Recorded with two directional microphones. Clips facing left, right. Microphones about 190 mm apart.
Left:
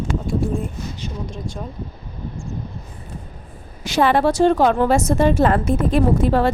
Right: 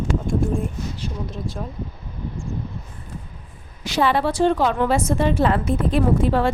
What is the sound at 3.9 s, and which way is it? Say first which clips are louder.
A woman's voice: left 3 dB; 45° left (ahead or behind).